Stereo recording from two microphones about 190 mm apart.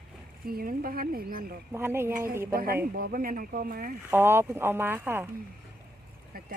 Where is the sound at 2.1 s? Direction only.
45° right (ahead or behind).